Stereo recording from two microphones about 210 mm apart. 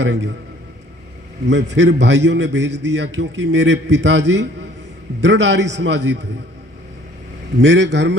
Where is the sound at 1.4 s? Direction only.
55° right (ahead or behind).